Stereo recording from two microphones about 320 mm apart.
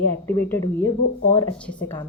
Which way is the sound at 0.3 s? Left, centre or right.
Centre.